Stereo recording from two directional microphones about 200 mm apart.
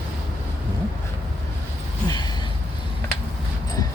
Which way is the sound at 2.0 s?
20° left (ahead or behind).